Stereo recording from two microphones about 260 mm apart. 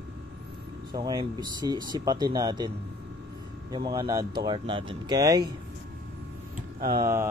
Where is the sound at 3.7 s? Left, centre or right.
Centre.